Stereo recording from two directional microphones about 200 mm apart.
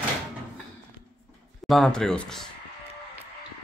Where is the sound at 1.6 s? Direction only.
Centre (ahead or behind).